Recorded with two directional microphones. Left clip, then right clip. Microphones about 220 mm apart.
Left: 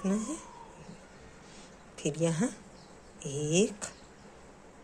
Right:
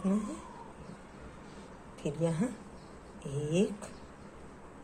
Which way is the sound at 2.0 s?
35° left (ahead or behind).